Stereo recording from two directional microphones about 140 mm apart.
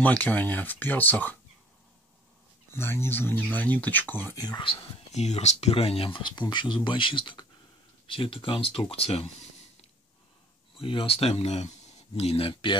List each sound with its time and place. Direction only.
0.0 s speech: 10° left (ahead or behind)
2.7 s speech: 15° left (ahead or behind)
4.4 s speech: 30° left (ahead or behind)
5.1 s speech: 55° left (ahead or behind)
10.8 s speech: 40° left (ahead or behind)